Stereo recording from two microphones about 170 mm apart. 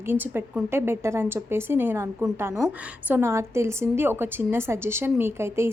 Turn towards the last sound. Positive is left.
turn(degrees=-15)  # may be behind; listen again after turning